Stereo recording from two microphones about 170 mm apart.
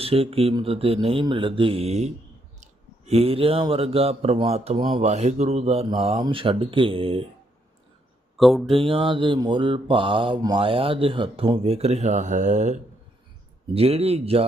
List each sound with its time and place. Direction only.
0.0 s mantra: 35° right (ahead or behind)
8.4 s speech: centre (ahead or behind)
8.6 s mantra: 30° right (ahead or behind)